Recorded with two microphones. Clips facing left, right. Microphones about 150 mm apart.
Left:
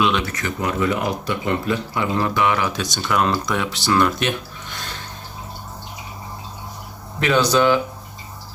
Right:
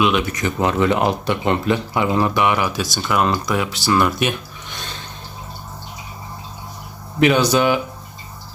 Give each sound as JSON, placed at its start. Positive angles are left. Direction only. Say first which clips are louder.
{"t": 0.0, "sound": "speech", "louder": "right 2 dB", "side_deg": -10}
{"t": 0.6, "sound": "speech", "louder": "right 4 dB", "side_deg": -85}
{"t": 2.0, "sound": "speech", "louder": "right 2 dB", "side_deg": -15}
{"t": 7.2, "sound": "speech", "louder": "right 2 dB", "side_deg": -15}